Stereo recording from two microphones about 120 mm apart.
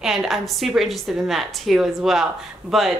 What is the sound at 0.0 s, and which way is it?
A woman's voice, 5° right (ahead or behind).